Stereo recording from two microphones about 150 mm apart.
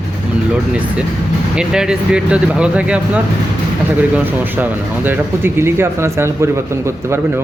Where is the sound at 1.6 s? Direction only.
5° right (ahead or behind).